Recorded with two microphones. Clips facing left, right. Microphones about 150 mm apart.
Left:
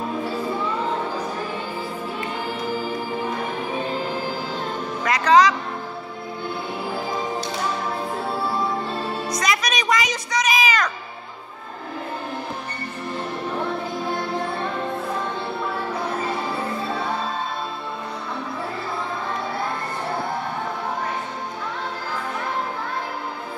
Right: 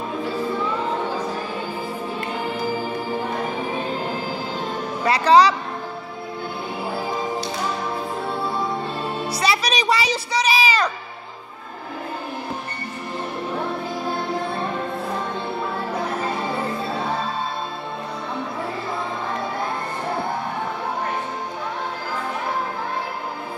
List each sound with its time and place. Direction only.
5.0 s speech: 35° right (ahead or behind)
9.3 s music: 30° right (ahead or behind)